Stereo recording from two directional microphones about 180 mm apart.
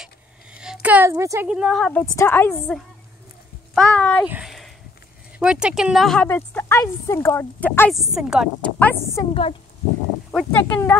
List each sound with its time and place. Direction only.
0.0 s a sound: 5° right (ahead or behind)
0.8 s a woman's voice: 10° right (ahead or behind)
1.5 s speech: centre (ahead or behind)
4.3 s a sound: 5° right (ahead or behind)
5.4 s speech: 5° right (ahead or behind); by 7.9 s 10° left (ahead or behind)
7.9 s speech: centre (ahead or behind)
8.6 s speech: 10° left (ahead or behind)
9.3 s speech: 30° left (ahead or behind)
10.3 s speech: 10° left (ahead or behind)